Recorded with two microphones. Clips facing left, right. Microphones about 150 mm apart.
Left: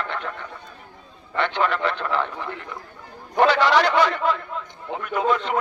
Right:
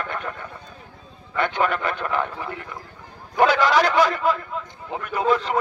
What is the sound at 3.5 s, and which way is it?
A man's voice, 45° right (ahead or behind).